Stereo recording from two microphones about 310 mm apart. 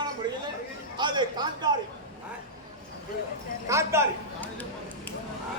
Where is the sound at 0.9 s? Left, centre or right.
Centre.